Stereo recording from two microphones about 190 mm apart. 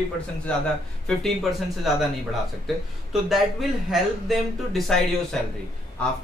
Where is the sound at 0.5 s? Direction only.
5° left (ahead or behind).